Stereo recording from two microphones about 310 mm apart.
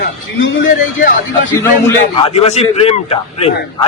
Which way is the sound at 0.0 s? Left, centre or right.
Left.